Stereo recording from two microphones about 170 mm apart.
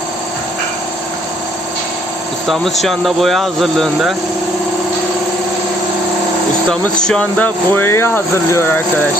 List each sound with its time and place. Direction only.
2.5 s speech: centre (ahead or behind)
6.7 s speech: 5° left (ahead or behind)